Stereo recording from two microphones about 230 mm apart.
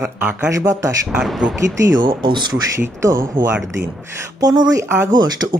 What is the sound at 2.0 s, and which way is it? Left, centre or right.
Speech, centre.